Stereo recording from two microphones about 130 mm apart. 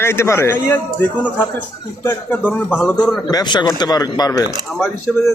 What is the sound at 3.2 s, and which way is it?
A man's voice, 30° left (ahead or behind).